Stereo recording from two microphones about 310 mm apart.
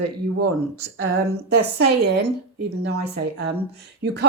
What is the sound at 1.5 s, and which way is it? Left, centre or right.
A woman's voice, right.